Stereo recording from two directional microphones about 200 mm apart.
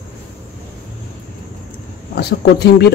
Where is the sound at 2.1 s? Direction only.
55° left (ahead or behind).